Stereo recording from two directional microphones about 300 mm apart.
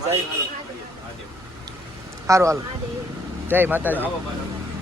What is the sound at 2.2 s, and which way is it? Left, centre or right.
Speech, centre.